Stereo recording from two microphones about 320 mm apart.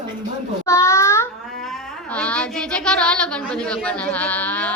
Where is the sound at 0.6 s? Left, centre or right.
Centre.